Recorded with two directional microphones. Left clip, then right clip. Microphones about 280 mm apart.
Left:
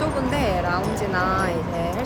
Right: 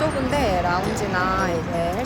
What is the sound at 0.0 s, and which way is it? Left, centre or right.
Speech, centre.